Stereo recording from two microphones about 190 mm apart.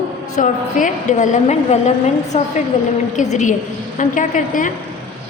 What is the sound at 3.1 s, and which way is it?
A woman's voice, 40° left (ahead or behind).